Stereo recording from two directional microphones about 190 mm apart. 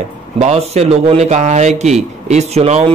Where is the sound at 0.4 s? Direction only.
35° right (ahead or behind).